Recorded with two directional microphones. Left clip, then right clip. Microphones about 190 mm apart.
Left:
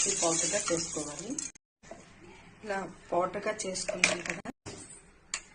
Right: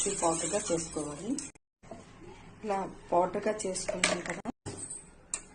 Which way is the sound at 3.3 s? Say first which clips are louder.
Right 2 dB; centre (ahead or behind).